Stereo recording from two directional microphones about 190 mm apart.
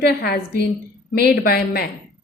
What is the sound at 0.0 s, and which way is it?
A woman's voice, 55° left (ahead or behind).